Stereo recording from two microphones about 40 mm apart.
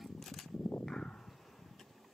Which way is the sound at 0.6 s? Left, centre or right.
Left.